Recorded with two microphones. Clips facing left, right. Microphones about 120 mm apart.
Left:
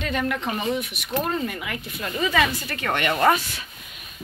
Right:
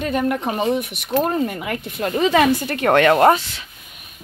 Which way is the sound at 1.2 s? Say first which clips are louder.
Right 6 dB; 40° right (ahead or behind).